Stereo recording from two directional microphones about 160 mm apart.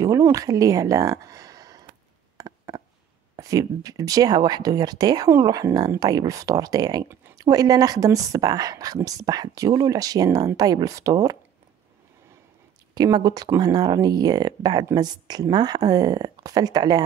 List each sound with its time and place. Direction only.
0.0 s speech: 20° right (ahead or behind)
2.3 s a sound: 20° right (ahead or behind)
3.3 s speech: 20° right (ahead or behind)
12.9 s speech: 25° right (ahead or behind)